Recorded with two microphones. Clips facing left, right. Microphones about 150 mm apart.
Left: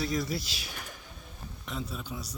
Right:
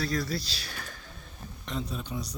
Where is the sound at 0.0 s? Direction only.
20° left (ahead or behind).